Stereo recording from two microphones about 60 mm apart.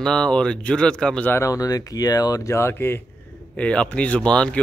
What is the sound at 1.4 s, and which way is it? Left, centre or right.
Speech, left.